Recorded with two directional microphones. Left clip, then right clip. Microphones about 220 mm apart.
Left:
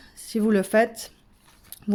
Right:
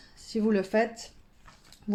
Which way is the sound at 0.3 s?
35° left (ahead or behind).